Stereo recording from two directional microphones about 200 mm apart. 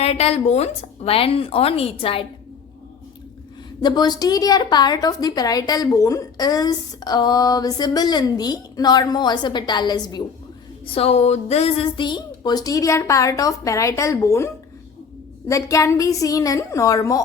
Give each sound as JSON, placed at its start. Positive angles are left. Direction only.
{"t": 0.0, "sound": "a woman's voice", "side_deg": 30}
{"t": 3.8, "sound": "a woman's voice", "side_deg": 20}
{"t": 10.9, "sound": "a woman's voice", "side_deg": 30}